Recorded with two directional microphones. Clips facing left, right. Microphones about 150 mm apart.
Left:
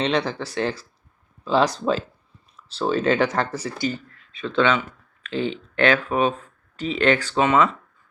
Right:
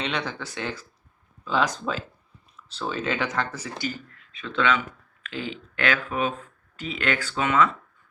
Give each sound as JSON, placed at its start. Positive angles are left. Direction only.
{"t": 0.0, "sound": "speech", "side_deg": 35}